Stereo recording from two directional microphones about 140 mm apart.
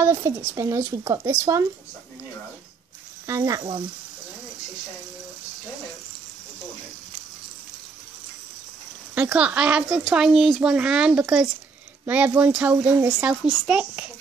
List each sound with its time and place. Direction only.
0.0 s speech: 20° right (ahead or behind)
3.3 s speech: 25° right (ahead or behind)
9.1 s a child's voice: 10° right (ahead or behind)